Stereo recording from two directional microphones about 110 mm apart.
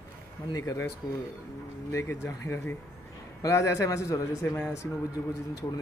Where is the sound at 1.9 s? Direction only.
25° left (ahead or behind).